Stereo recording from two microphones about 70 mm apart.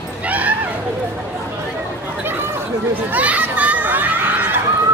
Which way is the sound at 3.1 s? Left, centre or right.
Right.